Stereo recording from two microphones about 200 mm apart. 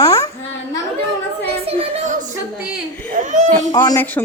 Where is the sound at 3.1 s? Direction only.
40° right (ahead or behind).